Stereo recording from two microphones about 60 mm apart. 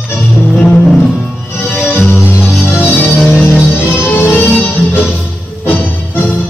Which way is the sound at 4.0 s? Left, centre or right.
Left.